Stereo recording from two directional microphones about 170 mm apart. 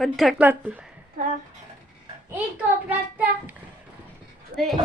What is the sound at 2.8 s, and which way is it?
Speech, 10° right (ahead or behind).